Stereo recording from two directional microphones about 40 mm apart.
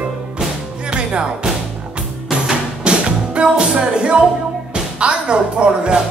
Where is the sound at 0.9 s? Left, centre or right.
Right.